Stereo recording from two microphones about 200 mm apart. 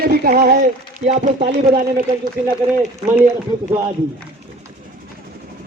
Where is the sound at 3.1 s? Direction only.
15° right (ahead or behind).